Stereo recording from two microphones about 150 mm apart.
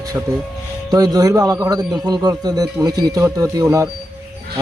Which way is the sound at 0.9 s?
25° right (ahead or behind).